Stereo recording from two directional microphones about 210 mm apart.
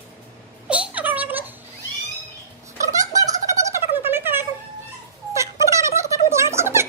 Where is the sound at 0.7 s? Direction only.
5° right (ahead or behind).